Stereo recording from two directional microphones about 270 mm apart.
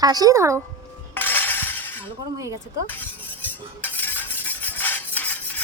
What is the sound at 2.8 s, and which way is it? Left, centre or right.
Cutlery, centre.